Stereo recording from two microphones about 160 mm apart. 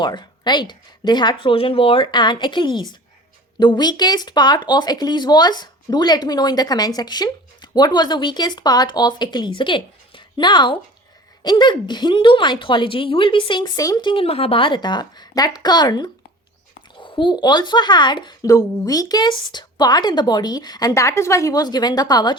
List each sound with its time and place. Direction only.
0.0 s speech: 30° left (ahead or behind)